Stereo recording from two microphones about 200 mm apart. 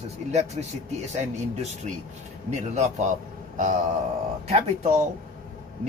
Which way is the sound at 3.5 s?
40° right (ahead or behind).